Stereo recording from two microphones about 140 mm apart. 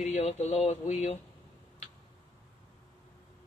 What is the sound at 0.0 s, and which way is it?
Speech, 50° left (ahead or behind).